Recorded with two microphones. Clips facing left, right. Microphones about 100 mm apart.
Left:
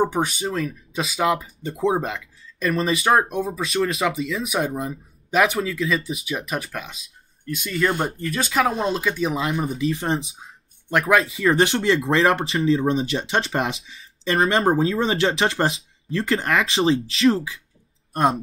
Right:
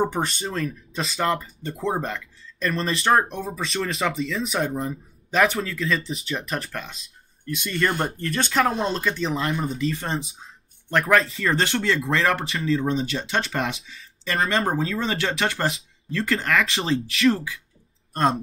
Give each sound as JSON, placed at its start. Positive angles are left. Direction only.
{"t": 0.0, "sound": "speech", "side_deg": 5}